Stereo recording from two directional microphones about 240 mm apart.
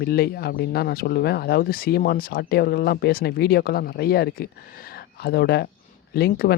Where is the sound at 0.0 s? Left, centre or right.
Left.